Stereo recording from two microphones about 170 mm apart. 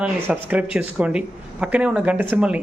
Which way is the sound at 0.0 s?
10° right (ahead or behind).